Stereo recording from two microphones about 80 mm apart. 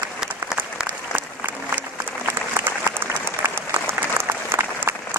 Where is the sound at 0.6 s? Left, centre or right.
Right.